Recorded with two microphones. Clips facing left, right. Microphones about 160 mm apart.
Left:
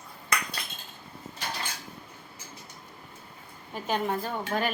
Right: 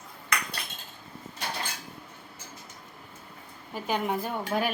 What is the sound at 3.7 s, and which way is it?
Speech, 10° right (ahead or behind).